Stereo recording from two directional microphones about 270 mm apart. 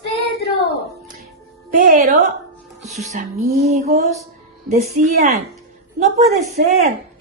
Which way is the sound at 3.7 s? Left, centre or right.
Right.